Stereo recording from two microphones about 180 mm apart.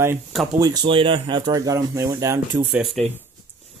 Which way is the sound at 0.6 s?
20° right (ahead or behind).